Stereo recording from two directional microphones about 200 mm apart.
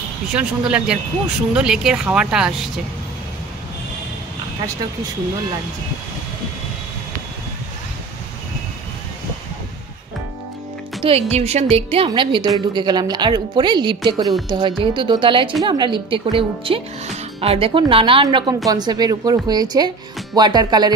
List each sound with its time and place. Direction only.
0.3 s speech: 5° right (ahead or behind)
11.0 s a woman's voice: 30° right (ahead or behind)